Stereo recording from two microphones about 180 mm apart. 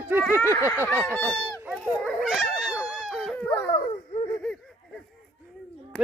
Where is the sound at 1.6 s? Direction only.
5° right (ahead or behind).